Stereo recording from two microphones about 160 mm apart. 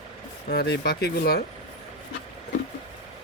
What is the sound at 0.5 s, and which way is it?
Speech, 90° left.